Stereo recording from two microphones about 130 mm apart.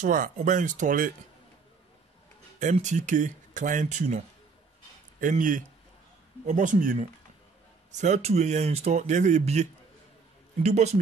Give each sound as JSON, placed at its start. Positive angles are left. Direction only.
{"t": 0.0, "sound": "speech", "side_deg": -85}
{"t": 2.6, "sound": "speech", "side_deg": -65}
{"t": 5.2, "sound": "speech", "side_deg": -90}
{"t": 7.9, "sound": "speech", "side_deg": -65}